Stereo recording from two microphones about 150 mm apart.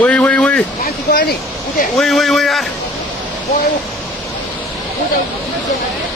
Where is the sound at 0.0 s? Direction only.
10° left (ahead or behind).